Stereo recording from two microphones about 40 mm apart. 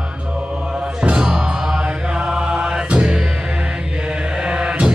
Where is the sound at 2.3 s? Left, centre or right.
Right.